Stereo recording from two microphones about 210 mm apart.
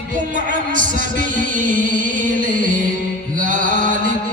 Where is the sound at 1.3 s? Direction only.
40° right (ahead or behind).